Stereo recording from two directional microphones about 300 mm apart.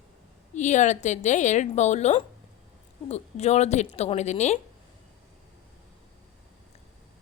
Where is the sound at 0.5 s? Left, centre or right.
Left.